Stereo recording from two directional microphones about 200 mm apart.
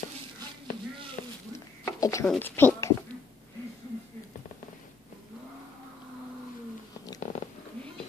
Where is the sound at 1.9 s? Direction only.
15° left (ahead or behind).